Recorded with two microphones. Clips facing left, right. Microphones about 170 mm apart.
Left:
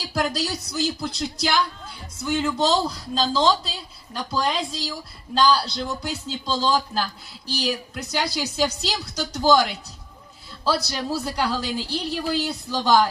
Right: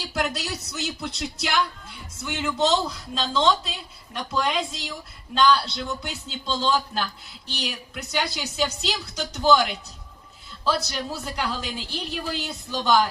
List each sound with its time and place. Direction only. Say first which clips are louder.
0.1 s a man's voice: left 4 dB; 35° left (ahead or behind)
10.8 s a man's voice: left 4 dB; 35° left (ahead or behind)